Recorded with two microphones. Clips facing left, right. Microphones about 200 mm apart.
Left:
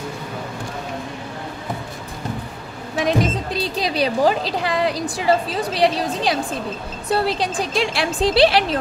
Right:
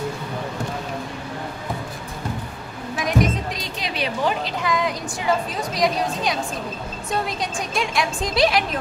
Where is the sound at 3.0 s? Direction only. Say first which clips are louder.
Left 2 dB; 30° left (ahead or behind).